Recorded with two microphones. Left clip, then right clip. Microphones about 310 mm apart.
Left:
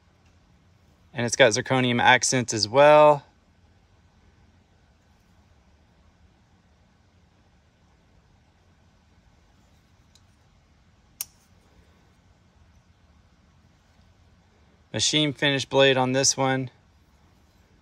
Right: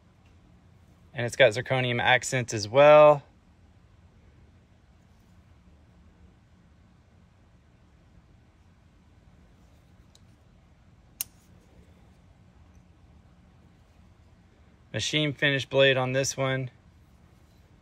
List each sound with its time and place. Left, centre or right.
1.1 s speech: centre
14.9 s speech: centre